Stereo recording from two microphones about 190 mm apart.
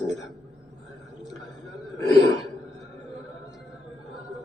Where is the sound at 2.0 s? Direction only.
20° left (ahead or behind).